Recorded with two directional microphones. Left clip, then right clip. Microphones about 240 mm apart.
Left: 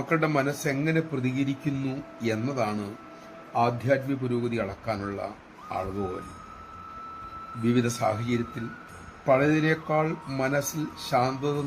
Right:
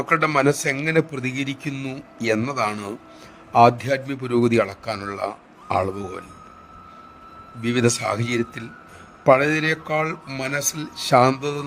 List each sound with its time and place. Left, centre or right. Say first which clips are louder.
0.1 s a man's voice: right 7 dB; right
7.6 s a man's voice: right 5 dB; right